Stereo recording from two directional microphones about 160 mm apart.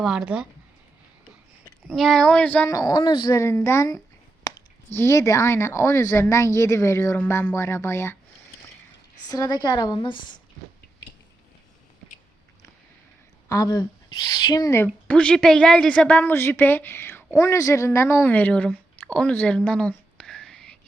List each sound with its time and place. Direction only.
0.0 s child singing: 5° right (ahead or behind)
1.9 s child singing: 5° left (ahead or behind)
2.6 s a woman's voice: 20° left (ahead or behind)
3.3 s speech: 15° left (ahead or behind)
9.3 s a woman's voice: 25° left (ahead or behind)
13.5 s a woman's voice: 20° left (ahead or behind)
15.0 s a woman's voice: 5° left (ahead or behind)